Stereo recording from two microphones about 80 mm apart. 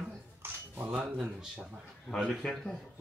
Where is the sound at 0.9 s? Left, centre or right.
Centre.